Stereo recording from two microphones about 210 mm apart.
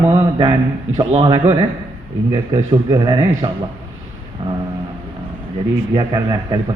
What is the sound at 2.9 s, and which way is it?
Speech, 15° right (ahead or behind).